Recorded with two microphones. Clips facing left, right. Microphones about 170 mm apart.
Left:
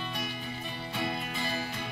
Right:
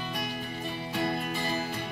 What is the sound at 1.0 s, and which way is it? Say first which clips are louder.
Music: right 3 dB; 45° right (ahead or behind).